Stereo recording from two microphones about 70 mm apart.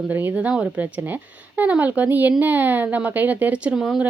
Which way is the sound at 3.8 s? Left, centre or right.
Centre.